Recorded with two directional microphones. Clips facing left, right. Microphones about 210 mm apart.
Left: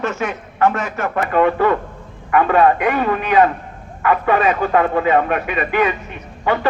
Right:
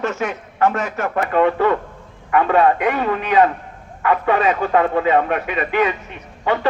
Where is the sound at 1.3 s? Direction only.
25° right (ahead or behind).